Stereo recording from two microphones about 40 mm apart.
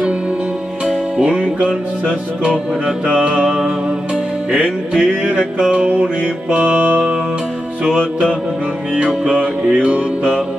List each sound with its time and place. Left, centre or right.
0.8 s music: centre
8.9 s music: right